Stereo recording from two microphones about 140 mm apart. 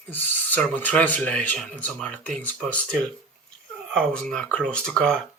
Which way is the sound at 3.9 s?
5° left (ahead or behind).